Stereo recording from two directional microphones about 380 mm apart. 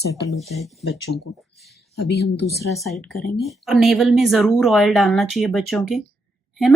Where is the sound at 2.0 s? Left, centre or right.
Left.